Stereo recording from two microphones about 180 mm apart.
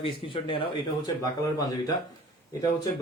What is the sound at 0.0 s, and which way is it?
A man's voice, 30° left (ahead or behind).